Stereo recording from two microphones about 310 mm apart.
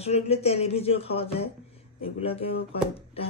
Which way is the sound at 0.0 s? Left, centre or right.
Centre.